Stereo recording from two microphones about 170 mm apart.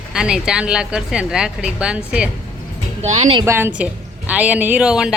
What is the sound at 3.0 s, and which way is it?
Speech, 40° right (ahead or behind).